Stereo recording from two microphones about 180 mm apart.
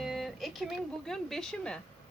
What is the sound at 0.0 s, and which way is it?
Speech, centre (ahead or behind).